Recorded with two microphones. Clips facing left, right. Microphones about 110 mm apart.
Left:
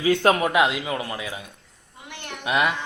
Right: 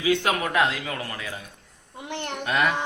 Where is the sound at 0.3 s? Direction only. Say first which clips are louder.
Left 3 dB; 20° left (ahead or behind).